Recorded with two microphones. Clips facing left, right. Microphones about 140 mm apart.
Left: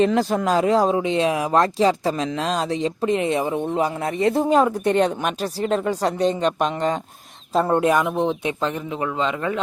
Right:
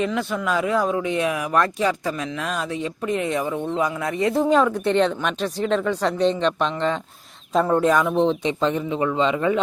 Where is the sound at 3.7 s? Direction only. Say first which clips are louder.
Left 1 dB; 30° left (ahead or behind).